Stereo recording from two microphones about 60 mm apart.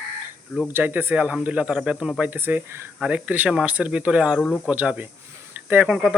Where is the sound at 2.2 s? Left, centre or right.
Right.